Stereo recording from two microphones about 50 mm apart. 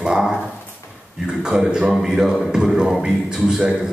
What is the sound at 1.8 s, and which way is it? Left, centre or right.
A man's voice, centre.